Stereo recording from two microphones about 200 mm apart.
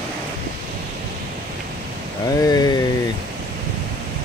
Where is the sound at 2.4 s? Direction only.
20° left (ahead or behind).